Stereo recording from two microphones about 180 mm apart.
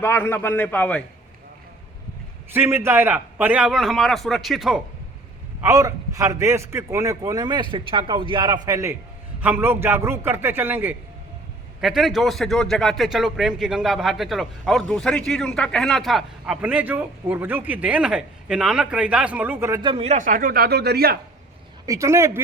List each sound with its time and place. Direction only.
0.0 s a man's voice: 15° left (ahead or behind)
2.5 s a man's voice: 15° right (ahead or behind)
5.6 s a man's voice: 15° right (ahead or behind)
11.8 s a man's voice: centre (ahead or behind)
19.8 s speech: 30° right (ahead or behind); by 21.2 s 60° right (ahead or behind)
21.8 s a man's voice: 15° right (ahead or behind)